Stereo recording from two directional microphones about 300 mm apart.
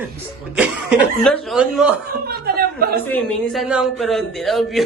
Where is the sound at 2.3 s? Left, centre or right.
Right.